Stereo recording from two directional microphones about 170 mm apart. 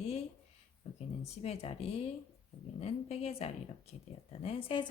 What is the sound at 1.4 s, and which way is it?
A woman's voice, 35° left (ahead or behind).